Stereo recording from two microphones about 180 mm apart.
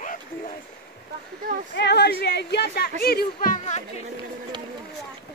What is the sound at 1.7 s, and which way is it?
Speech, 70° left (ahead or behind).